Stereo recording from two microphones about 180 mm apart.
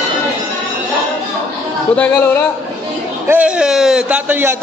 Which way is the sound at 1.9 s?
10° left (ahead or behind).